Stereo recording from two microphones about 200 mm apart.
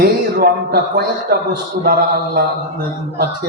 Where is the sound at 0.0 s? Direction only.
50° right (ahead or behind).